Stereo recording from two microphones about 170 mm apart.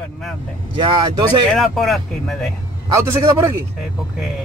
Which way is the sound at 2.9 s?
15° right (ahead or behind).